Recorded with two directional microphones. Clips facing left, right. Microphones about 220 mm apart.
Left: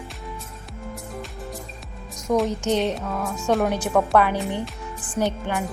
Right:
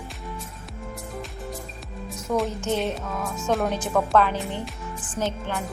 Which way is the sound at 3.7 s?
10° left (ahead or behind).